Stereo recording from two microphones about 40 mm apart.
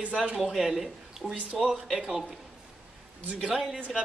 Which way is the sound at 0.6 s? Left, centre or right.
Centre.